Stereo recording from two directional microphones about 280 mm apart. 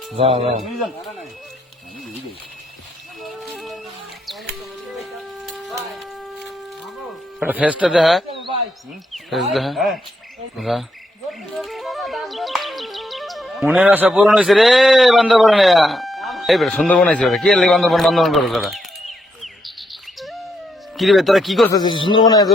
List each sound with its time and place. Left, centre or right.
0.2 s speech: centre
0.6 s speech: centre
3.2 s a sound: centre
4.9 s music: centre
7.3 s speech: centre
19.4 s bird: centre
20.9 s speech: centre
21.7 s a man's voice: centre